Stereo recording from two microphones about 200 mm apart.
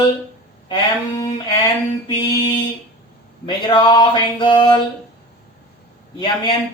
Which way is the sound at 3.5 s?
25° left (ahead or behind).